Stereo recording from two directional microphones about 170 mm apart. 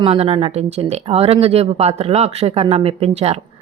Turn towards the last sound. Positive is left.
turn(degrees=-35)  # may be behind; listen again after turning